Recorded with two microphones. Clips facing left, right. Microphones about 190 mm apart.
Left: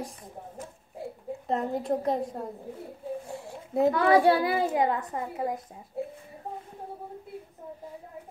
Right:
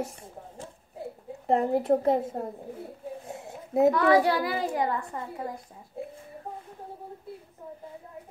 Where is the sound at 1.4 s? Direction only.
30° right (ahead or behind).